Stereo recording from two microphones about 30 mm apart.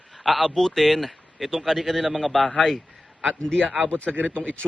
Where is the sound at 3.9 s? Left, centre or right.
Left.